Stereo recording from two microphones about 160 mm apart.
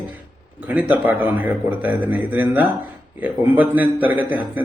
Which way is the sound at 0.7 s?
10° right (ahead or behind).